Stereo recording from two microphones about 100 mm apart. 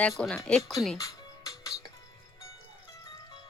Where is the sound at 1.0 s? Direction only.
35° left (ahead or behind).